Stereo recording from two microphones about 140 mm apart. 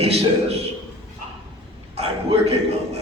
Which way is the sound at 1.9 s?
45° right (ahead or behind).